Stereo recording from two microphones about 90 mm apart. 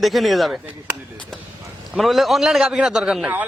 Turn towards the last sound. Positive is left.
turn(degrees=-5)  # may be behind; listen again after turning